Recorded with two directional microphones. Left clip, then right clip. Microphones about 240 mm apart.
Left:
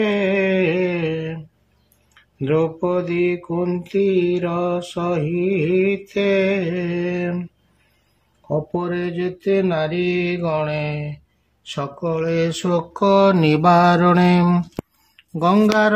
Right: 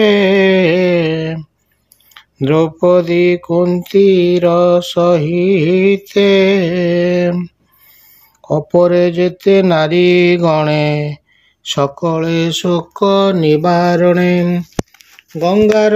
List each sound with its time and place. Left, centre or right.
0.0 s mantra: right
8.5 s mantra: right
11.6 s speech: right; by 15.7 s centre